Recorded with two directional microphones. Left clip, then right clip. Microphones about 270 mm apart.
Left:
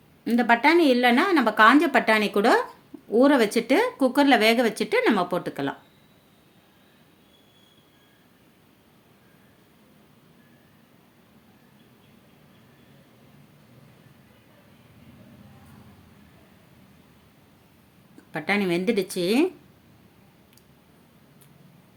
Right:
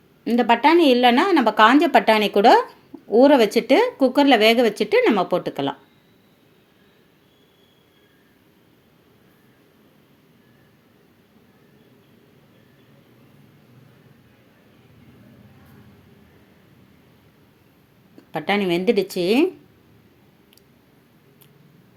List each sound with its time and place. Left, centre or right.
0.3 s speech: centre
18.3 s speech: centre